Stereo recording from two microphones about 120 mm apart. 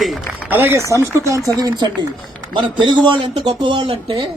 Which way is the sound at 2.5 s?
40° right (ahead or behind).